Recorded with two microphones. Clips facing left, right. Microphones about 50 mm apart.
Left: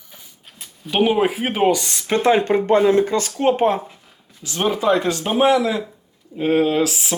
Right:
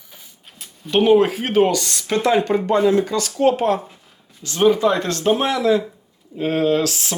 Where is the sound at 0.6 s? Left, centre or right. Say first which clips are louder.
Right 1 dB; centre.